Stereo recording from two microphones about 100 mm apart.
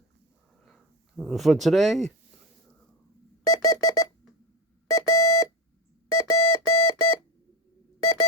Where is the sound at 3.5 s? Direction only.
35° left (ahead or behind).